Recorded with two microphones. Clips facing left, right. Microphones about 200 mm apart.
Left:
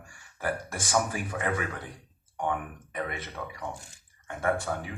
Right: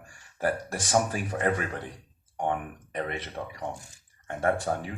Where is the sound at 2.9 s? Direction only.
35° right (ahead or behind).